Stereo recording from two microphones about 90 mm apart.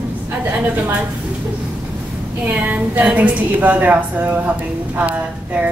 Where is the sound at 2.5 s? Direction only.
15° right (ahead or behind).